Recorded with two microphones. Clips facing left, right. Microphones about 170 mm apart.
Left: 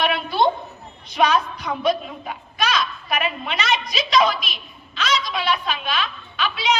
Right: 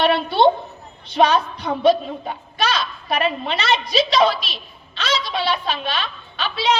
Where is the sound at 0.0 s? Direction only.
30° right (ahead or behind).